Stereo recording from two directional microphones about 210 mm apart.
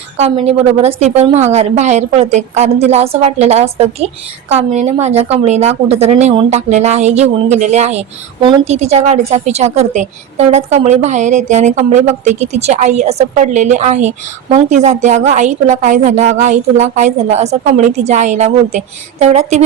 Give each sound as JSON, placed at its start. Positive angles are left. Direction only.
{"t": 0.2, "sound": "a woman's voice", "side_deg": -30}